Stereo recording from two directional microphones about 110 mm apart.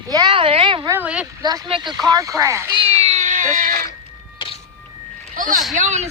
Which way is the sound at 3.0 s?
85° right.